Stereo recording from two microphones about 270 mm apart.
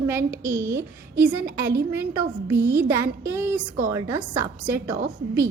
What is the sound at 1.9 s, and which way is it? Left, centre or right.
A woman's voice, centre.